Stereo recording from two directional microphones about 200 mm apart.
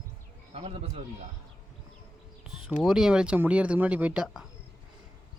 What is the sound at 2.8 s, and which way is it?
Speech, centre (ahead or behind).